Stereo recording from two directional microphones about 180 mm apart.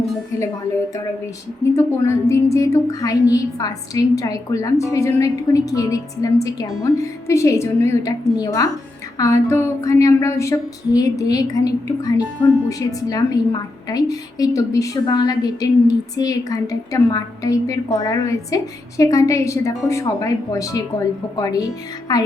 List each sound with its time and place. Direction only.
1.7 s a woman's voice: 15° left (ahead or behind)